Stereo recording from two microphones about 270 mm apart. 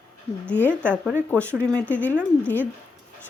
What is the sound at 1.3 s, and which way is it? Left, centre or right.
Speech, centre.